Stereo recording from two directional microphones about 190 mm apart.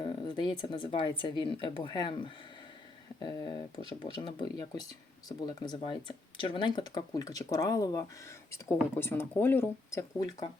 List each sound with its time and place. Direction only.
0.0 s speech: 25° left (ahead or behind)